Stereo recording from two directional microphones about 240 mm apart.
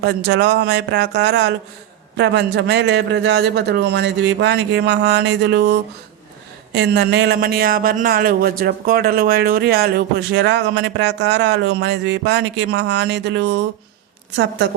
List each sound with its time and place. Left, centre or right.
0.0 s speech: right